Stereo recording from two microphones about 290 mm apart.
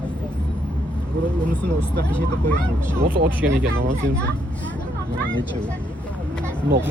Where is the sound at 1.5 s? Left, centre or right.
Centre.